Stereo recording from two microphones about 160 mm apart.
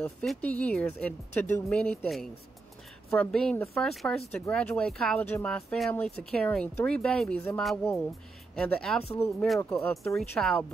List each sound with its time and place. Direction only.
0.0 s speech: 5° left (ahead or behind)
10.1 s speech: centre (ahead or behind)